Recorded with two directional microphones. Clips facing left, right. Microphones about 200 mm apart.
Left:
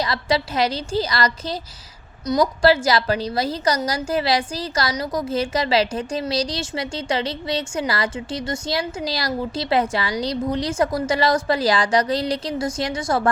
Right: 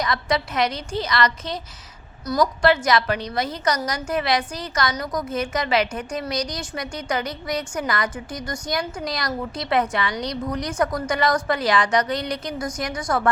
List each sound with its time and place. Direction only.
0.0 s a woman's voice: 30° left (ahead or behind)
2.2 s a woman's voice: 20° left (ahead or behind)
2.6 s a woman's voice: 30° left (ahead or behind)